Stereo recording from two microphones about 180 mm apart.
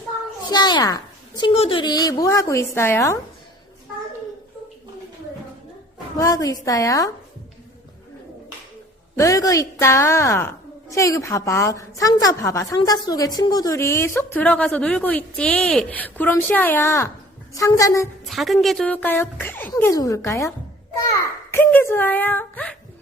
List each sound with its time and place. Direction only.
0.5 s a woman's voice: 25° left (ahead or behind)
1.4 s a woman's voice: 30° left (ahead or behind); by 3.2 s 15° left (ahead or behind)
6.1 s a woman's voice: 20° left (ahead or behind)
9.1 s a woman's voice: 20° left (ahead or behind)
18.3 s a woman's voice: centre (ahead or behind); by 20.5 s 15° left (ahead or behind)
21.5 s a woman's voice: 10° left (ahead or behind)